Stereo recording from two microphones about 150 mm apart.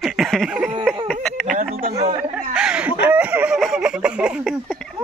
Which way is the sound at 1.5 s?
75° right (ahead or behind).